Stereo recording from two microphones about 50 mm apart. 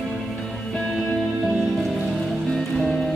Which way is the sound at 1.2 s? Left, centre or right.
Centre.